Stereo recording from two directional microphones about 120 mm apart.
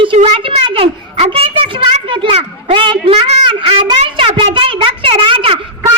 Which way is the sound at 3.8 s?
45° right (ahead or behind).